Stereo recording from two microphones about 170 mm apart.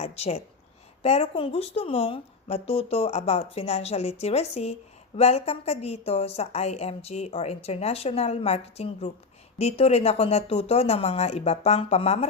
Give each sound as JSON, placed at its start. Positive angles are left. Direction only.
{"t": 0.0, "sound": "speech", "side_deg": 35}